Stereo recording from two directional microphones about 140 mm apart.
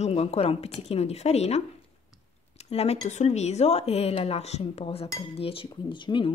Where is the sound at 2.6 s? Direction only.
45° left (ahead or behind).